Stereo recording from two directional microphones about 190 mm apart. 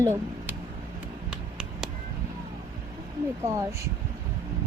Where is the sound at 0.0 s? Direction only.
15° right (ahead or behind).